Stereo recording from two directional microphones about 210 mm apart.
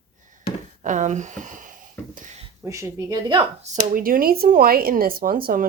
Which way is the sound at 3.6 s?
35° right (ahead or behind).